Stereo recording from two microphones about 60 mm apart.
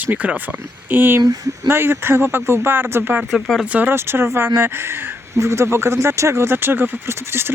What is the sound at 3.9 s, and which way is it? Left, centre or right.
Speech, right.